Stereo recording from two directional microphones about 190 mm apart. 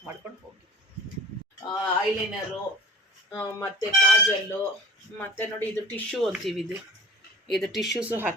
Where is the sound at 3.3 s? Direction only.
15° left (ahead or behind).